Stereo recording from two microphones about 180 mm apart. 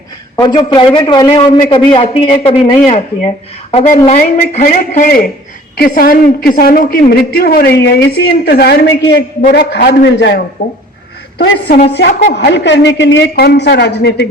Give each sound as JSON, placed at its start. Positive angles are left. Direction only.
{"t": 0.3, "sound": "a man's voice", "side_deg": 25}